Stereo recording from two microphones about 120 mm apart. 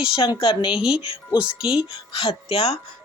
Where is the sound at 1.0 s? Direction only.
50° left (ahead or behind).